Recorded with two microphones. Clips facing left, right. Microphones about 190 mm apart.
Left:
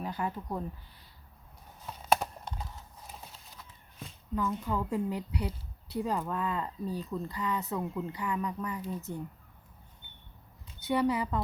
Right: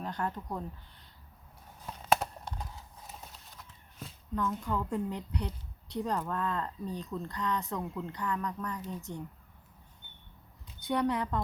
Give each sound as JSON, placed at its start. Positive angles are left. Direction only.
{"t": 0.0, "sound": "speech", "side_deg": 5}
{"t": 1.9, "sound": "clip-clop", "side_deg": 0}
{"t": 4.4, "sound": "speech", "side_deg": 5}
{"t": 10.8, "sound": "speech", "side_deg": 5}